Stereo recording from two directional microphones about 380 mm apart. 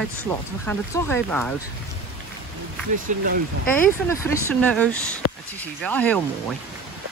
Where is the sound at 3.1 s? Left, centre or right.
Centre.